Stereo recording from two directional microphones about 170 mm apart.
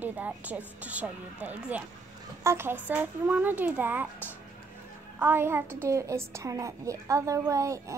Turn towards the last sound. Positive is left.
turn(degrees=-20)  # may be behind; listen again after turning